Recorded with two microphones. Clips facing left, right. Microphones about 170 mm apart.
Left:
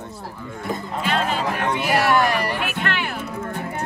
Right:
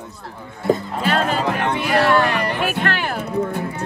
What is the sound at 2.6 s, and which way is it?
Speech, 40° right (ahead or behind).